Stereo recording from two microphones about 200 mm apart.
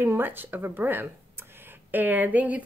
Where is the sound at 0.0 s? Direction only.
10° right (ahead or behind).